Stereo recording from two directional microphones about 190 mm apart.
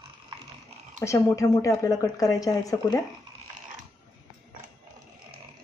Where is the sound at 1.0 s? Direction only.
15° left (ahead or behind).